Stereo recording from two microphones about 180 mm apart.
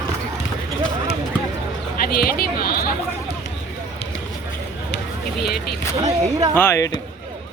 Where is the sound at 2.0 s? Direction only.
55° left (ahead or behind).